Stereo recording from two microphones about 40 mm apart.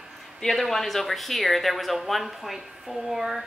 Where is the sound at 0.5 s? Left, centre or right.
Centre.